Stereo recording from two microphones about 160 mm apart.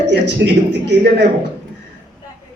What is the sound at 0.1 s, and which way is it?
A man's voice, 90° right.